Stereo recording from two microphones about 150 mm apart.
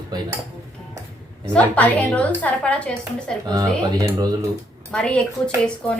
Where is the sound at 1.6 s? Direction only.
10° left (ahead or behind).